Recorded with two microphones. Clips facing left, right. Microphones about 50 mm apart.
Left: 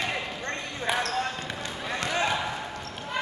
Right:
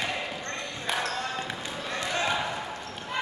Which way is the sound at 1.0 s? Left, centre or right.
Centre.